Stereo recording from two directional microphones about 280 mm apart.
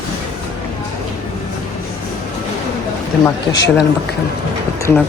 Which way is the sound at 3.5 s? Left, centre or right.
Left.